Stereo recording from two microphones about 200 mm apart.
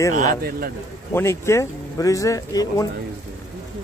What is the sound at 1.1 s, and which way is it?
Speech, 15° left (ahead or behind).